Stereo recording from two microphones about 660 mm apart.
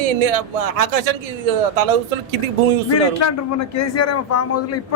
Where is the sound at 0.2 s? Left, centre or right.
Right.